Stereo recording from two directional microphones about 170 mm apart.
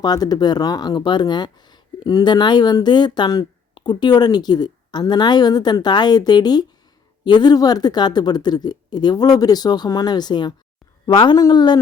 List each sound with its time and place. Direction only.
0.0 s speech: 25° left (ahead or behind)